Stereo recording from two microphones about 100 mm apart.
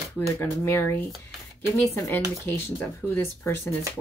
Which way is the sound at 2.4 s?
25° left (ahead or behind).